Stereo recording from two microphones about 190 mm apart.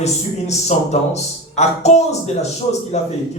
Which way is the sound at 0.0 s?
35° left (ahead or behind).